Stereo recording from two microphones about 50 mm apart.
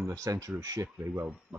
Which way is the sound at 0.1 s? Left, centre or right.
Right.